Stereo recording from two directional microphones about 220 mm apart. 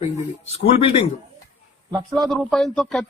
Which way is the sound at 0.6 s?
30° left (ahead or behind).